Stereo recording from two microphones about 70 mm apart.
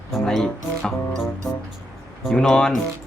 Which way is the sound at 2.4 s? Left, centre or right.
Centre.